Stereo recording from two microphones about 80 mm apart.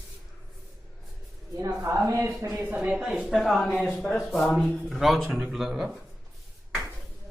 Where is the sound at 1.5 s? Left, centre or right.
Right.